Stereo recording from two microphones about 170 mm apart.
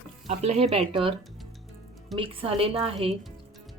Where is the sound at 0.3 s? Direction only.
40° right (ahead or behind).